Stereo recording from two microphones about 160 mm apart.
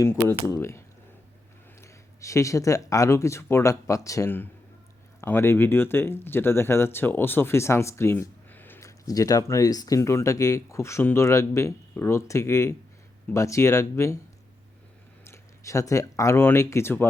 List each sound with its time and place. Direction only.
0.0 s speech: 15° left (ahead or behind)
15.2 s speech: 20° left (ahead or behind)